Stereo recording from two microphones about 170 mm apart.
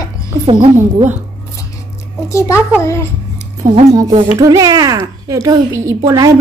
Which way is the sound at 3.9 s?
25° right (ahead or behind).